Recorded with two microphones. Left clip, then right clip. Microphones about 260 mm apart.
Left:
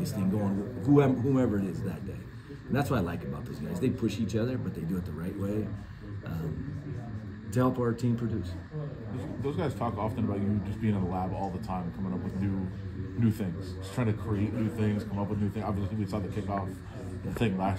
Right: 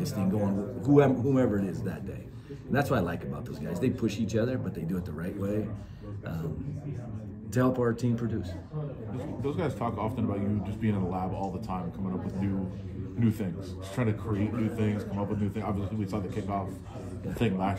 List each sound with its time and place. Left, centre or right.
0.0 s speech: centre
7.5 s speech: centre
9.4 s a man's voice: left
13.9 s a man's voice: left
14.4 s speech: centre
14.8 s a man's voice: left